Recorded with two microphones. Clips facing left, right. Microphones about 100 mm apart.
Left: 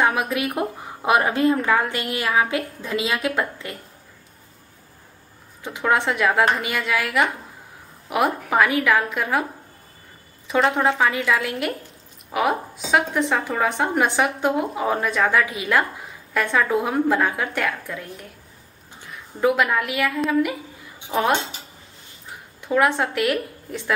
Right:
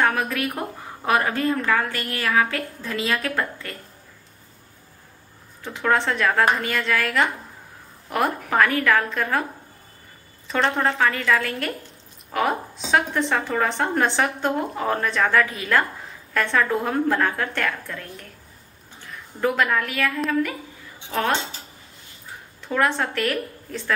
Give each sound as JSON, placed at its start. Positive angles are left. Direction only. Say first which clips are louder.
{"t": 0.0, "sound": "a woman's voice", "louder": "left 1 dB", "side_deg": 15}
{"t": 5.6, "sound": "a woman's voice", "louder": "left 1 dB", "side_deg": 15}
{"t": 10.5, "sound": "a woman's voice", "louder": "left 3 dB", "side_deg": 5}
{"t": 19.4, "sound": "a woman's voice", "louder": "left 2 dB", "side_deg": 10}
{"t": 22.6, "sound": "a sound", "louder": "left 3 dB", "side_deg": 15}
{"t": 22.8, "sound": "a woman's voice", "louder": "left 3 dB", "side_deg": 10}